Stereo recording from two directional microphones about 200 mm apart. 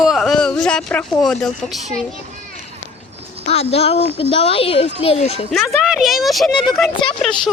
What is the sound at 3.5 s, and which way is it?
A child's voice, 30° left (ahead or behind).